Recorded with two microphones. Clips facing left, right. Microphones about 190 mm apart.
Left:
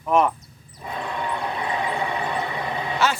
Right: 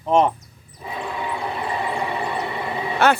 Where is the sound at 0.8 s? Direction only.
Centre (ahead or behind).